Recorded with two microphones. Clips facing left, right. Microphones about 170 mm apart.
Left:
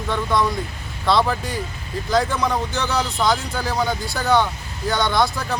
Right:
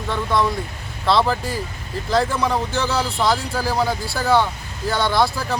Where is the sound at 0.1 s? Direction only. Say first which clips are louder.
Even; centre (ahead or behind).